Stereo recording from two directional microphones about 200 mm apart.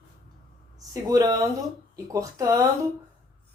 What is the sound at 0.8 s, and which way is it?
A woman's voice, 15° right (ahead or behind).